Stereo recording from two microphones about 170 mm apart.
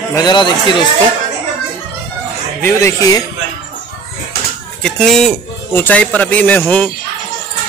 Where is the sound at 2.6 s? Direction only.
20° left (ahead or behind).